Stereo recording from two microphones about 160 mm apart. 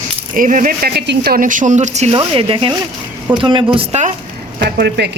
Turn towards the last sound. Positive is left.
turn(degrees=-90)